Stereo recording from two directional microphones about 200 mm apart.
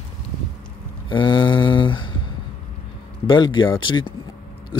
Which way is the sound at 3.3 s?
25° left (ahead or behind).